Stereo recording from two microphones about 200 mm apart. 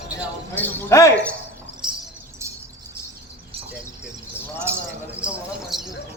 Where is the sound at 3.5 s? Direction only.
30° right (ahead or behind).